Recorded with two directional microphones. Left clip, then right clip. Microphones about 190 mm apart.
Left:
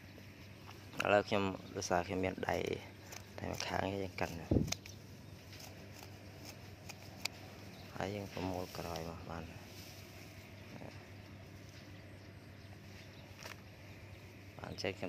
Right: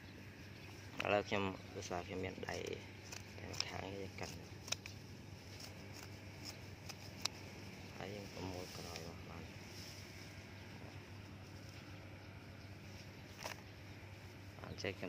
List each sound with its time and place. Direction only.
0.9 s speech: 20° left (ahead or behind)
8.0 s speech: 25° left (ahead or behind)
14.6 s a sound: 15° left (ahead or behind)